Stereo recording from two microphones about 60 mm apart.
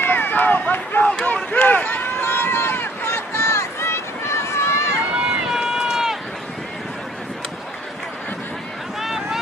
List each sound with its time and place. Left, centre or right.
0.0 s run: left
1.1 s a sound: left
1.5 s run: left
5.1 s run: centre
9.0 s vehicle: centre